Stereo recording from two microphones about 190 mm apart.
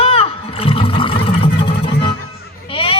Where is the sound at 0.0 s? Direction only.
30° left (ahead or behind).